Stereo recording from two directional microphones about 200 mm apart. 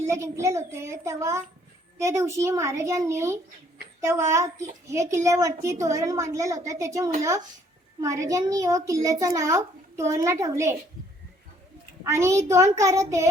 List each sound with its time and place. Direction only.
0.1 s a child's voice: 15° right (ahead or behind)
12.0 s a child's voice: 15° right (ahead or behind)